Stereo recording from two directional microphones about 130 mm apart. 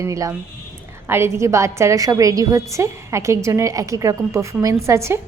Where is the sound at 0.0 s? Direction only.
25° right (ahead or behind).